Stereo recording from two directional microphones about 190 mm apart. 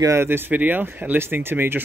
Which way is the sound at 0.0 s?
15° right (ahead or behind).